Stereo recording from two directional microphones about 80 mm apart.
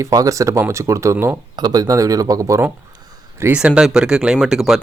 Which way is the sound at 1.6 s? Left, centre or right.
Right.